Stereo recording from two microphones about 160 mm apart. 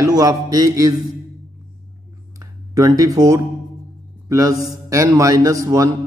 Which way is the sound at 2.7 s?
20° right (ahead or behind).